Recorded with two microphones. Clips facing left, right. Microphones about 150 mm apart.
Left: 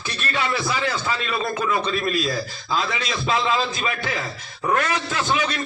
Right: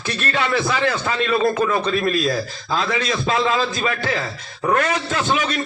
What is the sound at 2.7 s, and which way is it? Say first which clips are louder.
Speech: right 3 dB; 45° right (ahead or behind).